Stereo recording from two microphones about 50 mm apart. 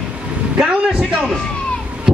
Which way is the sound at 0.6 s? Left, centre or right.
Centre.